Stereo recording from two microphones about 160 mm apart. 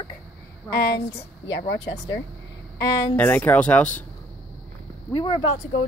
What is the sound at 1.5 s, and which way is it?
Speech, 30° left (ahead or behind).